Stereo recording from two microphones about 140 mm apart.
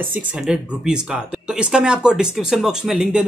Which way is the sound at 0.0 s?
10° right (ahead or behind).